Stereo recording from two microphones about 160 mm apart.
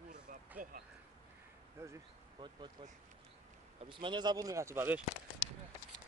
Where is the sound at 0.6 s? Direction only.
55° right (ahead or behind).